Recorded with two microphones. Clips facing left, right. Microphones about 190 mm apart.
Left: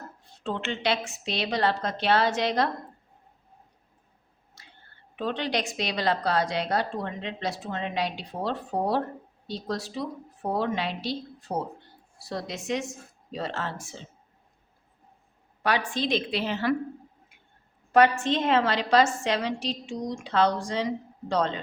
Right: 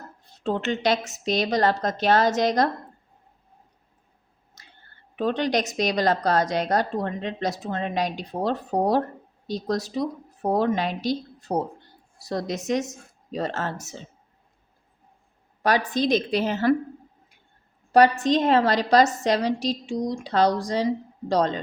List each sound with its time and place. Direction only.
0.4 s a woman's voice: 40° right (ahead or behind)
4.6 s whispering: 45° right (ahead or behind)
5.1 s a woman's voice: 45° right (ahead or behind)
15.6 s a woman's voice: 40° right (ahead or behind)
17.9 s a woman's voice: 35° right (ahead or behind)